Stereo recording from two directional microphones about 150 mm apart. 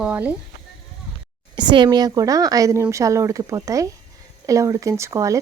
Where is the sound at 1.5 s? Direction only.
30° right (ahead or behind).